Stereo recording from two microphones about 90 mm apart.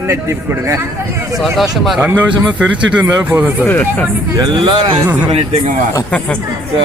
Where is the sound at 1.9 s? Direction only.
20° right (ahead or behind).